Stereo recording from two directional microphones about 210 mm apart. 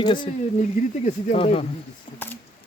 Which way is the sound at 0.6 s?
35° left (ahead or behind).